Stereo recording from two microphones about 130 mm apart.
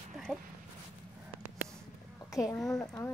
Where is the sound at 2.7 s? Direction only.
25° left (ahead or behind).